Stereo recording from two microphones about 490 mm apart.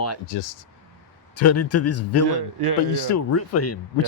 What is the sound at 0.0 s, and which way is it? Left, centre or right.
Speech, left.